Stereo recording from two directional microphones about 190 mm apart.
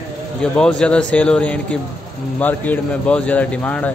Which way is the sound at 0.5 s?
5° left (ahead or behind).